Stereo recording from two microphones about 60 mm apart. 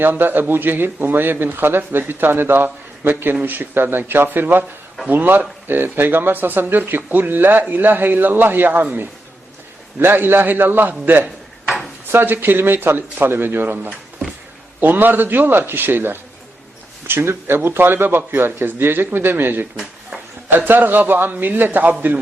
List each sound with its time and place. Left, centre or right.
0.0 s speech: right
19.7 s a sound: centre
20.7 s speech: right